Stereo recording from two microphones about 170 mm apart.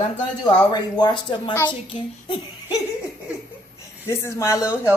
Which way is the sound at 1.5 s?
10° left (ahead or behind).